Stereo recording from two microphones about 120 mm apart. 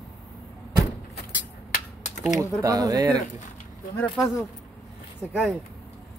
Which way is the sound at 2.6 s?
30° right (ahead or behind).